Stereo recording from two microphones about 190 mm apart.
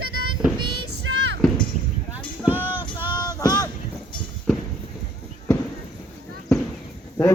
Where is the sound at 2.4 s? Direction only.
10° right (ahead or behind).